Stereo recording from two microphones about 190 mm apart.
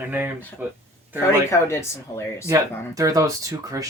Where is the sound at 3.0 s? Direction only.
15° right (ahead or behind).